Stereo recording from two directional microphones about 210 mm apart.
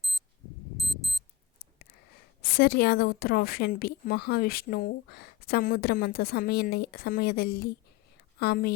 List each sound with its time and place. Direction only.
0.8 s alarm clock: centre (ahead or behind)
2.4 s a woman's voice: 45° left (ahead or behind)